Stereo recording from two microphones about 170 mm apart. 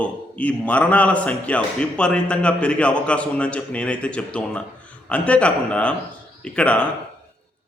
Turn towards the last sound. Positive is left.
turn(degrees=5)  # may be behind; listen again after turning